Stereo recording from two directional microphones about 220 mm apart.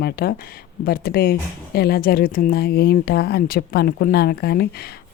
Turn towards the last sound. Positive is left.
turn(degrees=45)  # may be behind; listen again after turning